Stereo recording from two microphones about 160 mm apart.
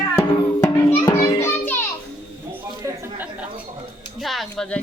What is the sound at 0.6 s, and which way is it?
Children playing, 25° left (ahead or behind).